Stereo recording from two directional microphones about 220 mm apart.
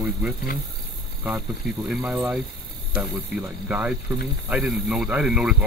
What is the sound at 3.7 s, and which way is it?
Speech, 5° right (ahead or behind).